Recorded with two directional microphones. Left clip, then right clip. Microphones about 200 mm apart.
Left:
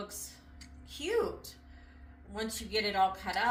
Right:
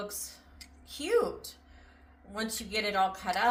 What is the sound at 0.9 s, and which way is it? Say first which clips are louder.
Speech: right 4 dB; 45° right (ahead or behind).